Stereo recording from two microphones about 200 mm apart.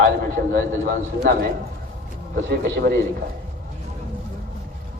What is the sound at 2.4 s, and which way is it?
Speech, 60° right (ahead or behind).